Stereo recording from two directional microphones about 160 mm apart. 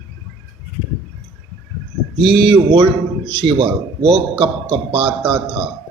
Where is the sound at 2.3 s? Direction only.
30° right (ahead or behind).